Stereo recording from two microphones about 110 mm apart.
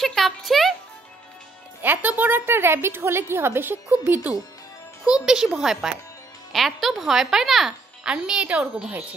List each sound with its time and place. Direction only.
0.0 s music: centre (ahead or behind)
1.8 s a woman's voice: 15° right (ahead or behind)